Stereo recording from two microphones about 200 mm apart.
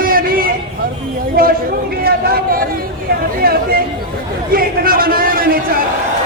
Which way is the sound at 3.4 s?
50° right (ahead or behind).